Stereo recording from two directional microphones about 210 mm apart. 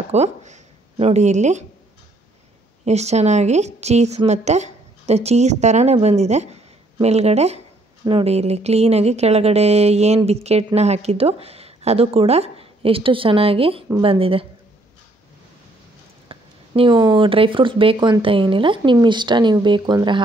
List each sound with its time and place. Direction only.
0.1 s speech: 30° right (ahead or behind)
2.8 s a woman's voice: 30° right (ahead or behind)
16.3 s speech: 25° right (ahead or behind)